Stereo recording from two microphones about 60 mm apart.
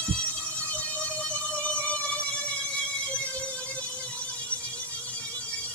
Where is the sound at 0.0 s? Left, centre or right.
Centre.